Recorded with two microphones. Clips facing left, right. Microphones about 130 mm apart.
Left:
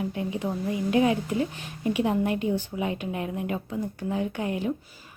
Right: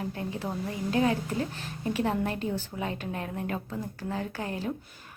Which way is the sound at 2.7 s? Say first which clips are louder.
Left 4 dB; centre (ahead or behind).